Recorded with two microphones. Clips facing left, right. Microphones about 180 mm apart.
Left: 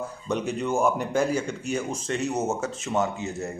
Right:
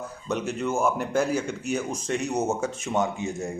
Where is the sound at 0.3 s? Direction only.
5° right (ahead or behind).